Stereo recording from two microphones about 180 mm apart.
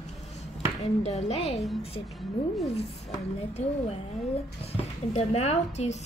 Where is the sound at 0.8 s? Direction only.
35° left (ahead or behind).